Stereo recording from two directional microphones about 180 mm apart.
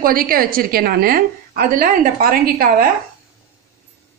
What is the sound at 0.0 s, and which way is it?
A woman's voice, 55° right (ahead or behind).